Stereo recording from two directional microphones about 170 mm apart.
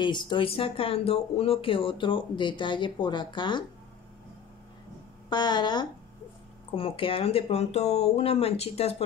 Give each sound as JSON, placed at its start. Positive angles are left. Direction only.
{"t": 0.0, "sound": "speech", "side_deg": 25}
{"t": 5.3, "sound": "speech", "side_deg": 25}